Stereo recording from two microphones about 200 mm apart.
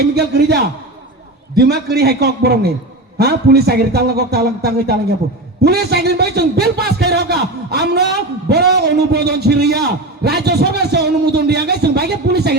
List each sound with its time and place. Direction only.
0.0 s a man's voice: 55° right (ahead or behind)